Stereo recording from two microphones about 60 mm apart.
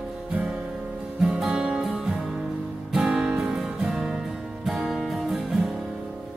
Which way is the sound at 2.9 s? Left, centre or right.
Centre.